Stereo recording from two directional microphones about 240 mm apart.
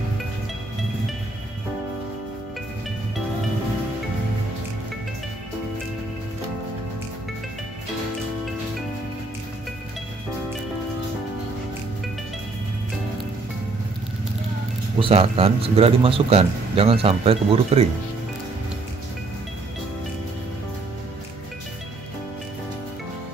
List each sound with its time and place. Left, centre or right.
15.0 s a man's voice: right